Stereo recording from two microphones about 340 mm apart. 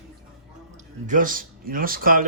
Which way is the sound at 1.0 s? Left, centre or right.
Right.